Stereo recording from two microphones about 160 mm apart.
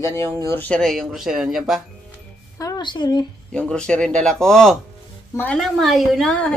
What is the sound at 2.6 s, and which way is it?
Speech, 25° left (ahead or behind).